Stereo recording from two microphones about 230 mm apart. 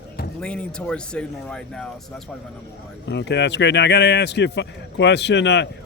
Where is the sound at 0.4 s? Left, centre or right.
Centre.